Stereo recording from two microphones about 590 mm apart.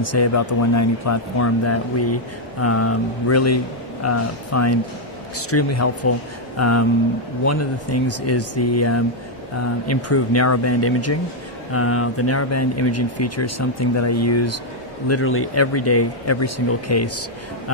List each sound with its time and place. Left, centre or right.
0.0 s speech: left